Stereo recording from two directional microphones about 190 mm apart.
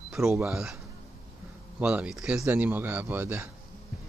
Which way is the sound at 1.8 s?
5° right (ahead or behind).